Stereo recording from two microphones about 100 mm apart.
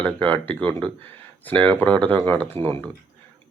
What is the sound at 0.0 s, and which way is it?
Speech, 15° left (ahead or behind).